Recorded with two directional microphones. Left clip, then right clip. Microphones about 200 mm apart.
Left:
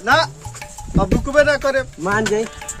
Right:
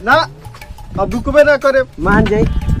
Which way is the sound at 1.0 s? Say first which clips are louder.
Right 5 dB; 20° right (ahead or behind).